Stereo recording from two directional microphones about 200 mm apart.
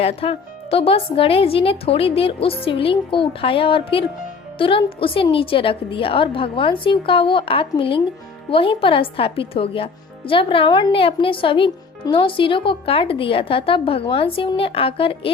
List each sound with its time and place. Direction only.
0.0 s speech: 30° left (ahead or behind)